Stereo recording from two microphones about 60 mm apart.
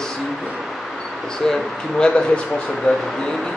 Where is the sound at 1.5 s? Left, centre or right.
Centre.